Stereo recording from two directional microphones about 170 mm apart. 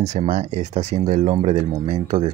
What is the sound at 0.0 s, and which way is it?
Speech, 40° right (ahead or behind).